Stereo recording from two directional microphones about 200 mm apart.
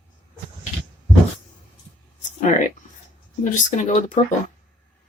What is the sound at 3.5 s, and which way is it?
Speech, 40° left (ahead or behind).